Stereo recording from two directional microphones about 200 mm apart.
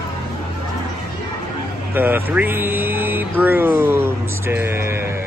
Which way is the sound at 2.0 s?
10° right (ahead or behind).